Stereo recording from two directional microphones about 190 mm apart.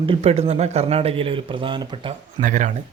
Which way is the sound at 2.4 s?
40° right (ahead or behind).